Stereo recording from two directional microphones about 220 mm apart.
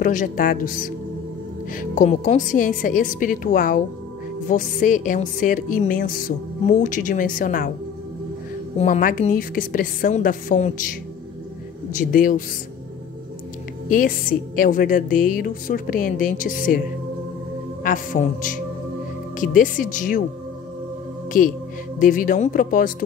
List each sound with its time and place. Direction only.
0.0 s music: 35° left (ahead or behind)
8.7 s music: 30° left (ahead or behind)
13.8 s music: 40° left (ahead or behind)
17.8 s music: 35° left (ahead or behind)
22.0 s music: 40° left (ahead or behind)